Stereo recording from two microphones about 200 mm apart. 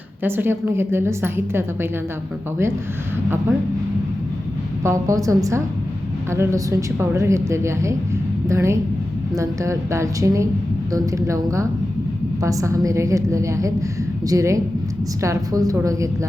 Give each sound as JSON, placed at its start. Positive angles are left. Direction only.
{"t": 0.2, "sound": "a woman's voice", "side_deg": -10}
{"t": 4.8, "sound": "a woman's voice", "side_deg": -15}